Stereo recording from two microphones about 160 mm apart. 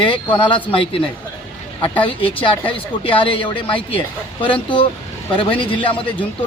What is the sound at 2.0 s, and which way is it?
Speech, 35° left (ahead or behind).